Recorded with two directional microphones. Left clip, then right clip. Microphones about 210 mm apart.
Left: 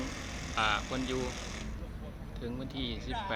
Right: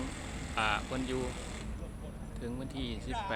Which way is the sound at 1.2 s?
40° left (ahead or behind).